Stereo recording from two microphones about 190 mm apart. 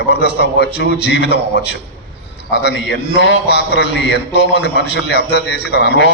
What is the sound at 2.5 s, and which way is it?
A man's voice, 65° left (ahead or behind).